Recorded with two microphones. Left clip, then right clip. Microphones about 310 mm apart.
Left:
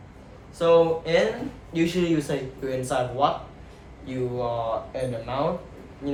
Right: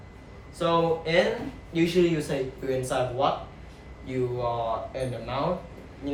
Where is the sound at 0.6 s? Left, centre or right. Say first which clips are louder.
Left 5 dB; centre.